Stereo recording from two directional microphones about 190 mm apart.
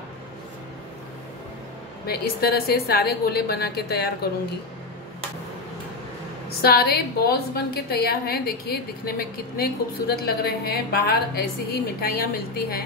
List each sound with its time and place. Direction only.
2.0 s a woman's voice: 55° left (ahead or behind)
6.6 s a woman's voice: 55° left (ahead or behind)